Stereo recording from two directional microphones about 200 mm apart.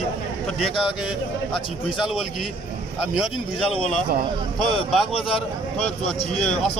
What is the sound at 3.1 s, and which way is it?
Speech, 5° right (ahead or behind).